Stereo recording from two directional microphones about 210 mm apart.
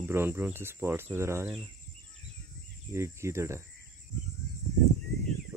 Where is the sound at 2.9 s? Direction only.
15° right (ahead or behind).